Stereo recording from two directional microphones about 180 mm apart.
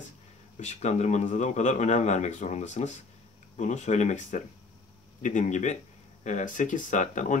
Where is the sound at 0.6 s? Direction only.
40° left (ahead or behind).